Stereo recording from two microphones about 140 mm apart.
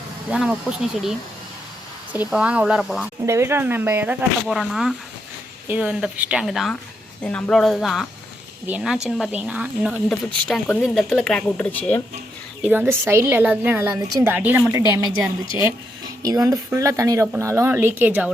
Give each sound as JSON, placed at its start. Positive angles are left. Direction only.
{"t": 0.3, "sound": "speech", "side_deg": -5}
{"t": 2.1, "sound": "speech", "side_deg": -5}
{"t": 3.2, "sound": "speech", "side_deg": -20}
{"t": 9.0, "sound": "speech", "side_deg": -5}
{"t": 10.4, "sound": "speech", "side_deg": 5}
{"t": 12.6, "sound": "speech", "side_deg": -10}
{"t": 14.3, "sound": "speech", "side_deg": -15}